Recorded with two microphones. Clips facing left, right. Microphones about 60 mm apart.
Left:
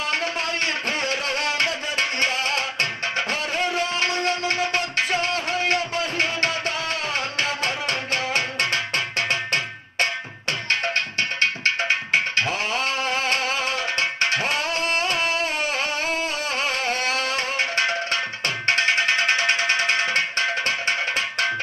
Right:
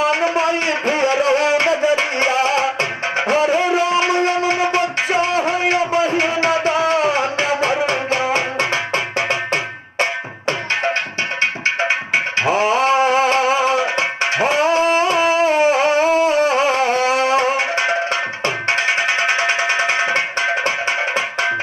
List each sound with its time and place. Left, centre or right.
0.0 s a sound: centre
7.8 s music: centre
12.4 s music: right